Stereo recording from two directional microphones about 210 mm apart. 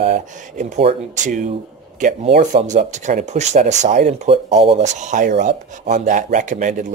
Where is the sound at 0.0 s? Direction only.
35° right (ahead or behind).